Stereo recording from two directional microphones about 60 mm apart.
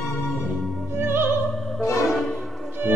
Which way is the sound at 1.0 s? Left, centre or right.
Right.